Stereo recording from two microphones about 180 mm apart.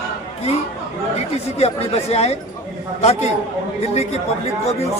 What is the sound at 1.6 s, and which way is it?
Speech, 35° left (ahead or behind).